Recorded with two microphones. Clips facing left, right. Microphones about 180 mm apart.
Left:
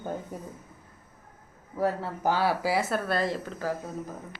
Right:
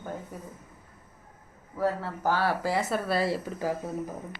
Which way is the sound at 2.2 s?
15° left (ahead or behind).